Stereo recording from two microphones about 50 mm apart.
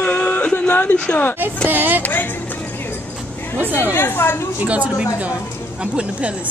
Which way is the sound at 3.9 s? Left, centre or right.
Left.